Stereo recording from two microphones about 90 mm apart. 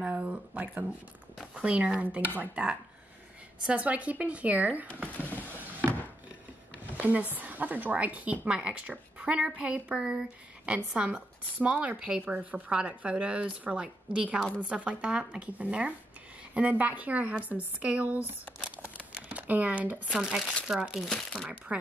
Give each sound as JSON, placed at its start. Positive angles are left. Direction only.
{"t": 0.0, "sound": "a woman's voice", "side_deg": -15}
{"t": 7.0, "sound": "a woman's voice", "side_deg": -15}
{"t": 18.8, "sound": "a sound", "side_deg": -15}
{"t": 20.1, "sound": "speech", "side_deg": -5}